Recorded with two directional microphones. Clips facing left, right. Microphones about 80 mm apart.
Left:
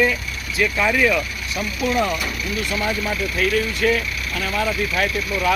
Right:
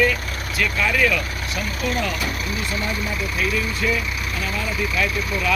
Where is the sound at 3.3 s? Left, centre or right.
Left.